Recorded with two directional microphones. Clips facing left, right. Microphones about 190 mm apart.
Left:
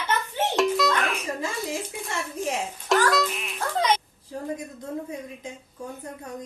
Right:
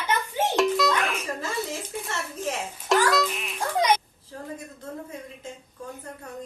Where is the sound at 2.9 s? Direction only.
Centre (ahead or behind).